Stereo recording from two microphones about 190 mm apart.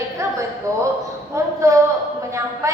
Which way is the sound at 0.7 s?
15° right (ahead or behind).